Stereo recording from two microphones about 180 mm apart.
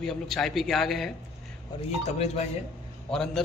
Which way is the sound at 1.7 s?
25° left (ahead or behind).